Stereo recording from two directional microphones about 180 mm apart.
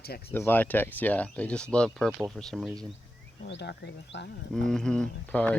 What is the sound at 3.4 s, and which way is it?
Speech, 70° left (ahead or behind).